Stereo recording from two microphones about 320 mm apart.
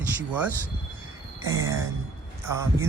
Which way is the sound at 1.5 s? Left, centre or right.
Centre.